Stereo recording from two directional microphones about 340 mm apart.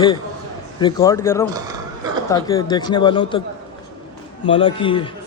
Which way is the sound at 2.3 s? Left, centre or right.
Centre.